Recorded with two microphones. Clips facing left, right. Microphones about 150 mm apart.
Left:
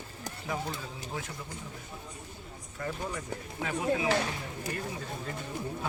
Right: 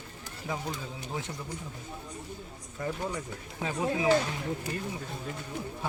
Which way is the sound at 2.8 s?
15° right (ahead or behind).